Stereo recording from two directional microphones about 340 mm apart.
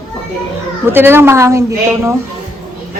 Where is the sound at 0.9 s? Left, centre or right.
Centre.